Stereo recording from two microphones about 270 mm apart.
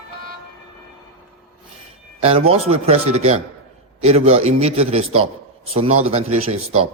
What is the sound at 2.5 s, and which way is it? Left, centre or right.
Speech, right.